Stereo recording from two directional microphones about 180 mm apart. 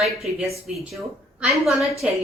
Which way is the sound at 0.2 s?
Centre (ahead or behind).